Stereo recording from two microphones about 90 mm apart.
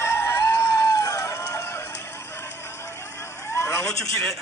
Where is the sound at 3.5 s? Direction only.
35° left (ahead or behind).